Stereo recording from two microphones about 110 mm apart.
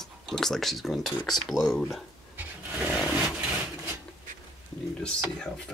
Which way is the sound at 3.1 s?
10° right (ahead or behind).